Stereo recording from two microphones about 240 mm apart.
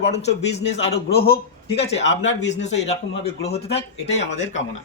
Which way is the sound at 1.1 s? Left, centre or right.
Left.